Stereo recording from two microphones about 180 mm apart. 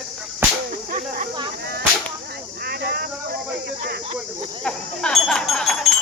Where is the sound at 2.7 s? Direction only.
60° right (ahead or behind).